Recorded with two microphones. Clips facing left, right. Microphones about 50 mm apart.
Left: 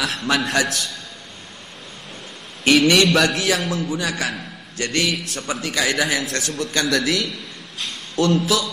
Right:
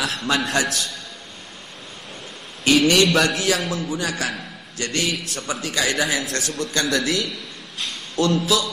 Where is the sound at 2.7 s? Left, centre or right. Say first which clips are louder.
Left 1 dB; left.